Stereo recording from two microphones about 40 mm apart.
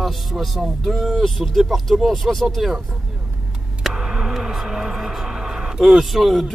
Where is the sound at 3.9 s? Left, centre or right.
Centre.